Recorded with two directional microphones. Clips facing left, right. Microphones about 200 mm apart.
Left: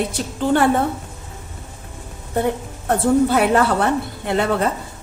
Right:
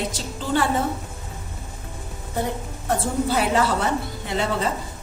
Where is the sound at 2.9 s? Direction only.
60° left (ahead or behind).